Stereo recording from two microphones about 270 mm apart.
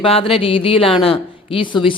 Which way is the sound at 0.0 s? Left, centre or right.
Centre.